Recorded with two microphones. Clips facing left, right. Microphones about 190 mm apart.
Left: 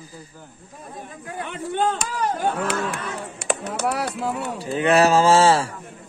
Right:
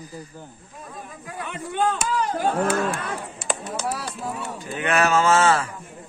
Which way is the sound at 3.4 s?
65° left (ahead or behind).